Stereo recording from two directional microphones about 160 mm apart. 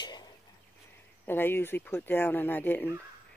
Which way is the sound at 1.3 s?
15° left (ahead or behind).